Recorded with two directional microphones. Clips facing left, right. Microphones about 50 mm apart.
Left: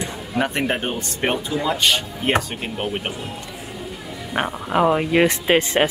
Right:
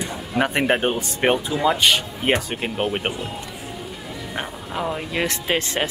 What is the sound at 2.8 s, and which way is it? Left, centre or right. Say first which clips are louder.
Speech: right 1 dB; right.